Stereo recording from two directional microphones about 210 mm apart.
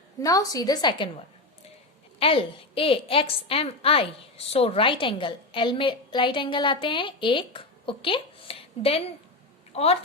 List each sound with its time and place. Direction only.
0.2 s a woman's voice: 15° left (ahead or behind)
2.1 s a woman's voice: 25° left (ahead or behind)